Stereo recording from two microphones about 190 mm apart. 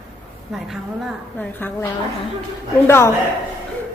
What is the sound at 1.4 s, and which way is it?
Speech, 10° left (ahead or behind).